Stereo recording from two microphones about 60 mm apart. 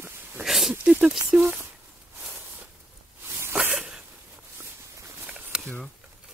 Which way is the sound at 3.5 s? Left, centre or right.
Centre.